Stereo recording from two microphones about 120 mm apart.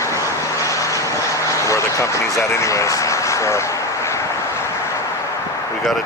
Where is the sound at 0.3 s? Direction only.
25° left (ahead or behind).